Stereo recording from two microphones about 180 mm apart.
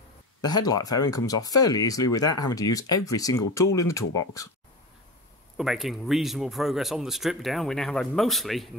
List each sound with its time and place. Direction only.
0.4 s speech: 20° left (ahead or behind)
5.6 s speech: centre (ahead or behind)